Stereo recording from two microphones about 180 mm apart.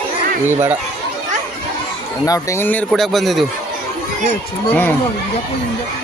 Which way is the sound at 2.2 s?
20° left (ahead or behind).